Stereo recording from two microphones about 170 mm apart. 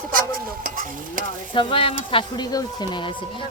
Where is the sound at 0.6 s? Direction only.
50° right (ahead or behind).